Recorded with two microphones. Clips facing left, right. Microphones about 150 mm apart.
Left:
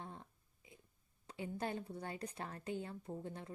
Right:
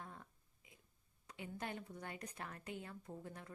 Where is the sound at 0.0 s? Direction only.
25° left (ahead or behind).